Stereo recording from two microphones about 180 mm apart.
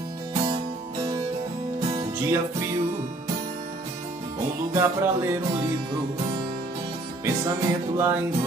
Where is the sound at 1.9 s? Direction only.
15° right (ahead or behind).